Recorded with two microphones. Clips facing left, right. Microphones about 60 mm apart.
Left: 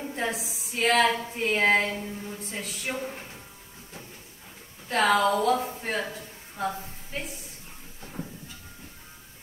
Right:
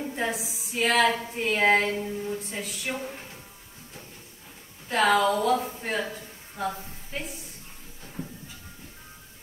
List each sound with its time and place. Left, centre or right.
0.0 s a woman's voice: centre
1.2 s a sound: centre
3.0 s speech: left
4.8 s a woman's voice: centre